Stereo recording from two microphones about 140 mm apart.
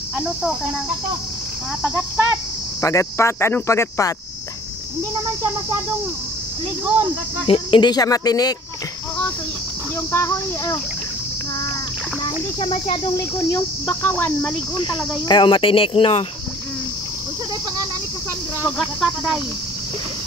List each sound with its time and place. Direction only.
1.8 s cricket: 5° right (ahead or behind)
2.8 s speech: 20° left (ahead or behind)
7.4 s speech: 40° left (ahead or behind)
10.1 s speech: 20° left (ahead or behind)
12.5 s speech: 45° left (ahead or behind)
13.5 s speech: 15° left (ahead or behind)
14.8 s speech: 35° left (ahead or behind)
18.8 s speech: centre (ahead or behind)